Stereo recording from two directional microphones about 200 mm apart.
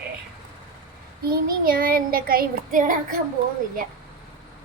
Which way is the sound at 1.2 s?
45° right (ahead or behind).